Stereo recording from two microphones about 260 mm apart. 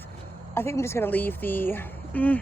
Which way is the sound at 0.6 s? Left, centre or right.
Centre.